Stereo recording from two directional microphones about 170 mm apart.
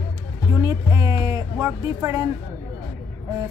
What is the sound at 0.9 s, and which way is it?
Speech, 20° right (ahead or behind).